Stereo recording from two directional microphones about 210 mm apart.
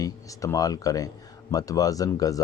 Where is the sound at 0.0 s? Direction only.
15° left (ahead or behind).